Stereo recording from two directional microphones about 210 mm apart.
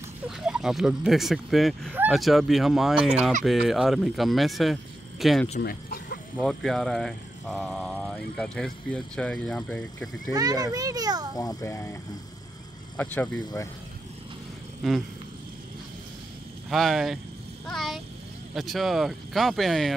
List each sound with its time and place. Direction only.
0.4 s speech: centre (ahead or behind)
5.6 s speech: 45° left (ahead or behind)
6.4 s speech: centre (ahead or behind)
10.3 s a child's voice: 20° right (ahead or behind)
11.3 s a child's voice: 15° left (ahead or behind)
14.8 s a sound: centre (ahead or behind)
16.6 s speech: centre (ahead or behind)
17.6 s a sound: centre (ahead or behind)
18.5 s speech: centre (ahead or behind)